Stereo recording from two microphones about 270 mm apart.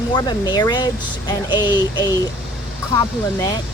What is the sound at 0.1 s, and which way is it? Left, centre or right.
Speech, centre.